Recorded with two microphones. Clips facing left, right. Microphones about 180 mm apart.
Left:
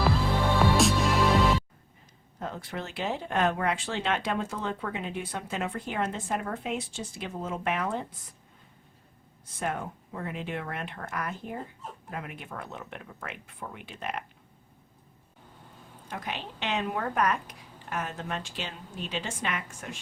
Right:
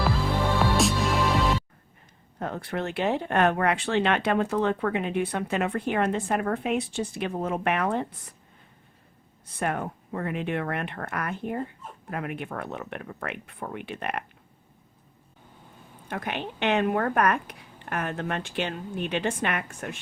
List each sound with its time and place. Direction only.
0.6 s music: centre (ahead or behind)
2.4 s speech: 60° right (ahead or behind)
9.6 s speech: 60° right (ahead or behind)
16.0 s speech: 60° right (ahead or behind)